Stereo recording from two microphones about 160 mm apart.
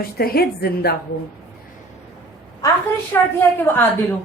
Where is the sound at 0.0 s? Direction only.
70° left (ahead or behind).